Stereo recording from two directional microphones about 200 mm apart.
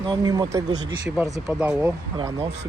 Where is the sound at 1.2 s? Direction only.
5° right (ahead or behind).